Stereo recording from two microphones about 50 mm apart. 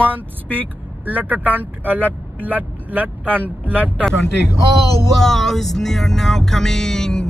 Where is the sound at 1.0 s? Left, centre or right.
Right.